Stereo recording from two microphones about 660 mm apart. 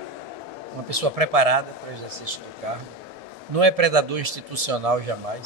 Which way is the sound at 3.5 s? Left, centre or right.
Right.